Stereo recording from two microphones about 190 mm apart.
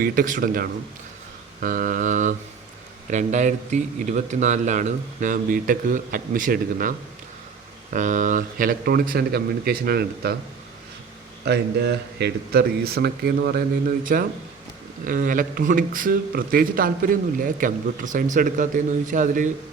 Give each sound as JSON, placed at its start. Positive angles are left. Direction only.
{"t": 0.0, "sound": "a man's voice", "side_deg": -50}
{"t": 7.9, "sound": "a man's voice", "side_deg": -40}
{"t": 11.4, "sound": "a man's voice", "side_deg": -60}